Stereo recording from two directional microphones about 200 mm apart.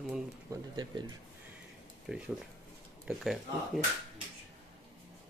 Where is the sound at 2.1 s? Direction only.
5° right (ahead or behind).